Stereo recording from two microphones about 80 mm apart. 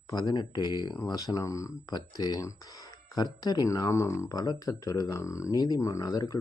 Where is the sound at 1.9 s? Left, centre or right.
Left.